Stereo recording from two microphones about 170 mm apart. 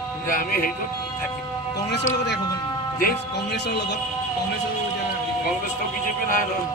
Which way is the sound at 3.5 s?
80° left.